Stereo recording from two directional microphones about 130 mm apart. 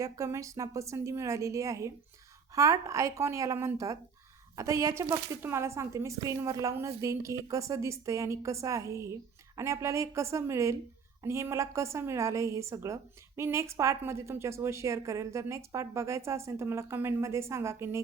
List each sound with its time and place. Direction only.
0.0 s a woman's voice: 25° right (ahead or behind)